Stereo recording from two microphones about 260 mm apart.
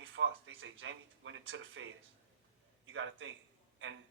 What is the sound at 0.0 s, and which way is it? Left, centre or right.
Speech, right.